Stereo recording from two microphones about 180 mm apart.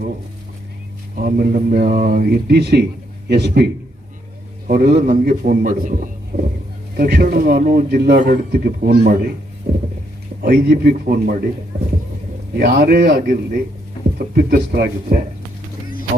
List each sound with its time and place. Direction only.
1.1 s speech: 55° right (ahead or behind)
4.7 s speech: 55° right (ahead or behind)
6.9 s speech: 60° right (ahead or behind)
12.5 s speech: 65° right (ahead or behind)